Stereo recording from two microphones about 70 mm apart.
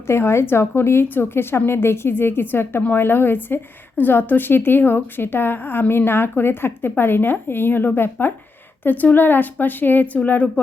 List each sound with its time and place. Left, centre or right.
0.1 s a woman's voice: left